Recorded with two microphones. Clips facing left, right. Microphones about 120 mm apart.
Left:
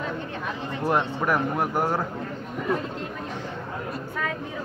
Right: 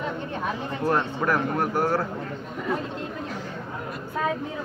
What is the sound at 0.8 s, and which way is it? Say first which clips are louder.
Speech: even; 15° left (ahead or behind).